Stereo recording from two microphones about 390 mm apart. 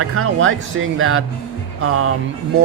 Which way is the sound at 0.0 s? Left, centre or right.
Right.